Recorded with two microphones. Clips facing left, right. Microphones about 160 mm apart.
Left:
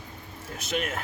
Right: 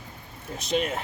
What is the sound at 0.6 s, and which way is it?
Speech, 30° right (ahead or behind).